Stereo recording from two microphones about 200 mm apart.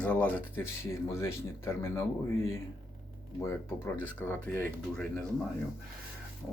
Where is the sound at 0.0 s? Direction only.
5° left (ahead or behind).